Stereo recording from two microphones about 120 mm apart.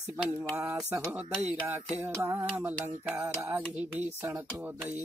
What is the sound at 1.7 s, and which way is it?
Speech, 15° right (ahead or behind).